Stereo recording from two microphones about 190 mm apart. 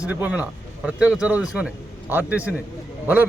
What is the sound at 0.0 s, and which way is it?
A man's voice, 10° right (ahead or behind).